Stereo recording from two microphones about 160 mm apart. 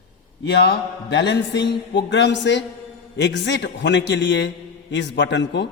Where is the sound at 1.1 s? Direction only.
90° left.